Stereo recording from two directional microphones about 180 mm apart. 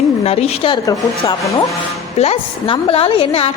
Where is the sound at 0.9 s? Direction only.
20° left (ahead or behind).